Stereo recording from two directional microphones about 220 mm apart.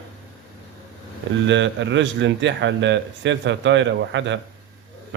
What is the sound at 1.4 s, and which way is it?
A man's voice, 55° right (ahead or behind).